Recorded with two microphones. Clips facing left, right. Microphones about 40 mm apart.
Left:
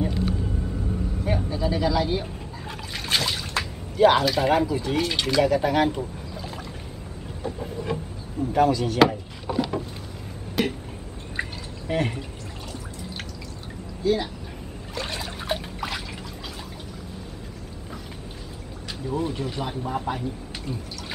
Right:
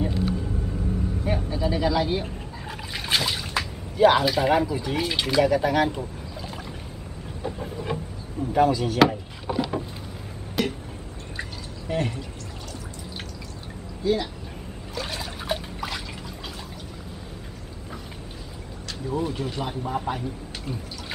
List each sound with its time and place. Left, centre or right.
0.0 s vehicle: centre
1.2 s speech: centre
7.4 s speech: centre
10.6 s a sound: centre
11.9 s speech: left
15.0 s trickle: centre
19.0 s speech: centre